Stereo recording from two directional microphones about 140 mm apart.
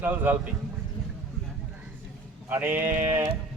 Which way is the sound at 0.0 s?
15° right (ahead or behind).